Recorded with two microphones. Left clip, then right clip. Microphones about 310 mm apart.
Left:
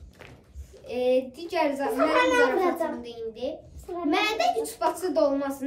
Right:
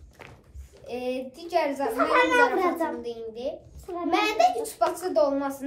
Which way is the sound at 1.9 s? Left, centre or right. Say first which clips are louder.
Even; centre.